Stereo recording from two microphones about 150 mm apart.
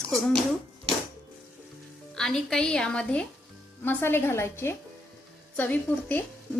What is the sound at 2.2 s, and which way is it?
A woman's voice, 5° left (ahead or behind).